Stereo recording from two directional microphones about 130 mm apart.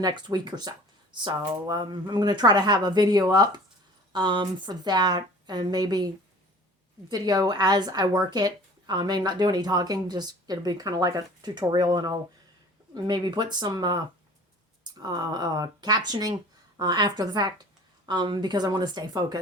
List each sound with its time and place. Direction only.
0.0 s a woman's voice: 35° right (ahead or behind)
7.1 s a woman's voice: 30° right (ahead or behind)